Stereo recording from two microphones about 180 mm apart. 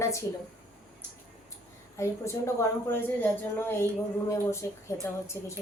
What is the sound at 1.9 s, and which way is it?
A woman's voice, 15° left (ahead or behind).